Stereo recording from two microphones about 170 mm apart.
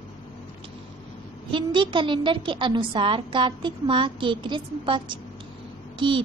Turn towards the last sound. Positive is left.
turn(degrees=-30)  # may be behind; listen again after turning